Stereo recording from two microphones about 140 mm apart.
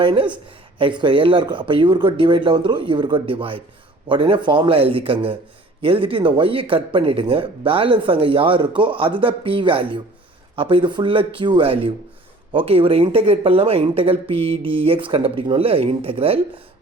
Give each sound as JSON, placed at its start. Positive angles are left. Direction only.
{"t": 0.0, "sound": "speech", "side_deg": -35}